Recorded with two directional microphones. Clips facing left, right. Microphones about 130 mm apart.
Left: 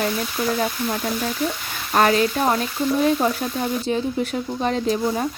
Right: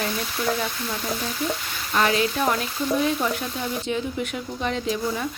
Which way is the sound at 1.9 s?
40° left (ahead or behind).